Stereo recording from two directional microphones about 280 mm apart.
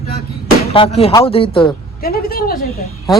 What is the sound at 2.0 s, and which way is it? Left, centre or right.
Speech, left.